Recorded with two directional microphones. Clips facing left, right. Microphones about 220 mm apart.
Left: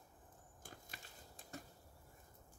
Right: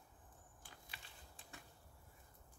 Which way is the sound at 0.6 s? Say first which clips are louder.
Left 5 dB; 45° left (ahead or behind).